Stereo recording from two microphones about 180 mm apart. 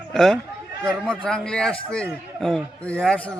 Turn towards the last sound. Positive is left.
turn(degrees=5)  # may be behind; listen again after turning